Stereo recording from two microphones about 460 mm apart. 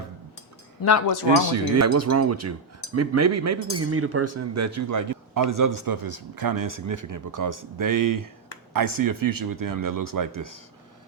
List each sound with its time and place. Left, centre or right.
0.8 s speech: left
1.5 s speech: right